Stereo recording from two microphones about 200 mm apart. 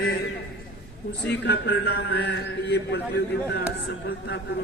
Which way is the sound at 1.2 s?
55° left (ahead or behind).